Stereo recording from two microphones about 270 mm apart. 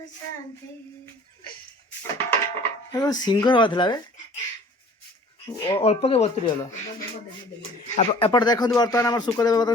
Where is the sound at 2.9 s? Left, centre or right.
Centre.